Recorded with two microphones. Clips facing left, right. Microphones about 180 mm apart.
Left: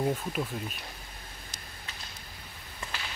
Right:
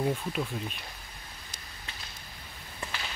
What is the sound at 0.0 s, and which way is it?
Speech, 5° left (ahead or behind).